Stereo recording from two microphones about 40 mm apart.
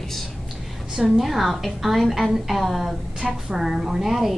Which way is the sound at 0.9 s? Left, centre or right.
Centre.